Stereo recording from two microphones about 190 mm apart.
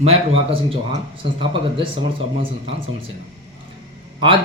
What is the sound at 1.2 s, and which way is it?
Speech, 25° right (ahead or behind).